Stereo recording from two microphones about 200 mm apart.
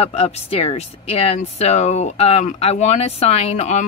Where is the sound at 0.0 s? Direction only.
30° left (ahead or behind).